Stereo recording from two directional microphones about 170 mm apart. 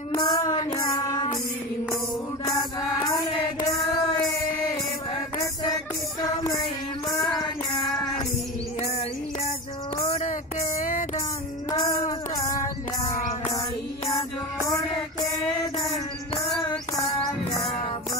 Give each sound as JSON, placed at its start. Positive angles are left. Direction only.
{"t": 0.1, "sound": "child singing", "side_deg": 20}
{"t": 2.4, "sound": "music", "side_deg": 20}
{"t": 10.8, "sound": "music", "side_deg": 50}
{"t": 11.8, "sound": "music", "side_deg": 20}